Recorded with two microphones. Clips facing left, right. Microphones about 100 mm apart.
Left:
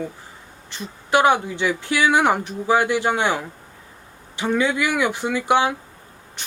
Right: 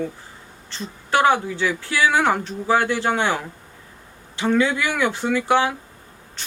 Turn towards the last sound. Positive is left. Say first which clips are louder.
# even
turn(degrees=15)  # may be behind; listen again after turning